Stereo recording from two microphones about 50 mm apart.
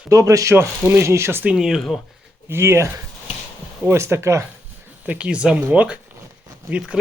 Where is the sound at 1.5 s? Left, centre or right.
Centre.